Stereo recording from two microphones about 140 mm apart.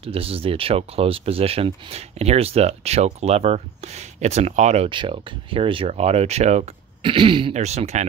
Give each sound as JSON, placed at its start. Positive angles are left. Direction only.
{"t": 0.0, "sound": "speech", "side_deg": -40}
{"t": 4.8, "sound": "speech", "side_deg": -35}
{"t": 7.0, "sound": "speech", "side_deg": -40}
{"t": 7.5, "sound": "speech", "side_deg": -50}